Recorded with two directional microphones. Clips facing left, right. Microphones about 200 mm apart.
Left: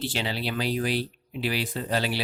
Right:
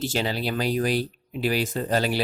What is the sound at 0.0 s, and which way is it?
Speech, 45° right (ahead or behind).